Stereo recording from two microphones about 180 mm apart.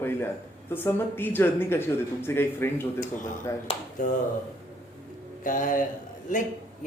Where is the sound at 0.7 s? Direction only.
15° left (ahead or behind).